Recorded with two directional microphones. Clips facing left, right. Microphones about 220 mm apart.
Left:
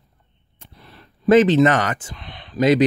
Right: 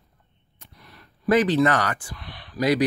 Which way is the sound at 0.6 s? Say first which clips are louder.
Left 4 dB; 30° left (ahead or behind).